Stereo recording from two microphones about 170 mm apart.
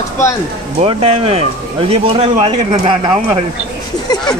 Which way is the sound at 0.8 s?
35° right (ahead or behind).